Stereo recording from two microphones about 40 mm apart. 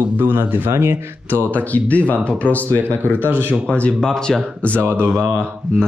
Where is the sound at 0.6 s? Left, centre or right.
Right.